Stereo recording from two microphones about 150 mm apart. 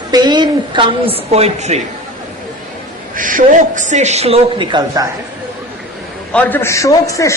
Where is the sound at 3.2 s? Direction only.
60° right (ahead or behind); by 5.0 s 30° right (ahead or behind).